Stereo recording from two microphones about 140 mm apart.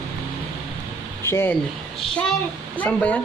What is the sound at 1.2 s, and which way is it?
Speech, 15° left (ahead or behind).